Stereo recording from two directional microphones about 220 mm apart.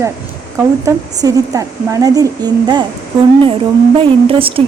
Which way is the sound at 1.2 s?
15° right (ahead or behind).